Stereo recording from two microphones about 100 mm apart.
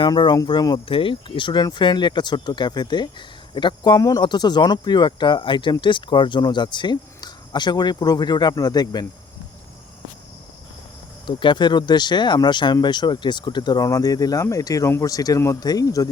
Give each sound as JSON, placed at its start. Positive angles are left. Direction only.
{"t": 0.0, "sound": "speech", "side_deg": 50}
{"t": 0.9, "sound": "speech", "side_deg": 60}
{"t": 11.3, "sound": "speech", "side_deg": 55}
{"t": 13.8, "sound": "speech", "side_deg": 35}